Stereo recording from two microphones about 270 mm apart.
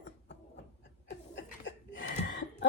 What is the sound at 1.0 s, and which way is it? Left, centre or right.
Chuckle, left.